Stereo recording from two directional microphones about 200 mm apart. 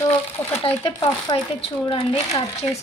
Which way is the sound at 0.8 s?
25° left (ahead or behind).